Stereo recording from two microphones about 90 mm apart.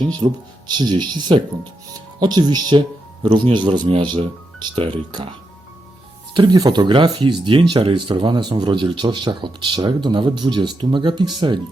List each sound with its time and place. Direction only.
0.2 s speech: 60° right (ahead or behind)
4.7 s speech: 90° right
6.3 s speech: 60° right (ahead or behind)